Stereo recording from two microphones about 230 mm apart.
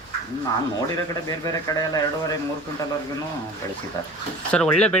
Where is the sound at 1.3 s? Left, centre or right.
Centre.